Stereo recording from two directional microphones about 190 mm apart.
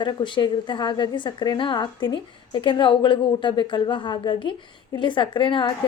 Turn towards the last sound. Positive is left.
turn(degrees=25)  # may be behind; listen again after turning